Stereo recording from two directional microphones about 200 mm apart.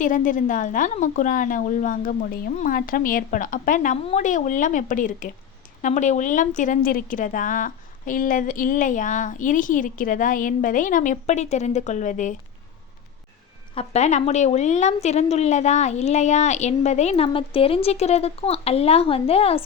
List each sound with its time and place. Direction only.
0.0 s a woman's voice: 40° left (ahead or behind)
13.7 s a woman's voice: 35° left (ahead or behind)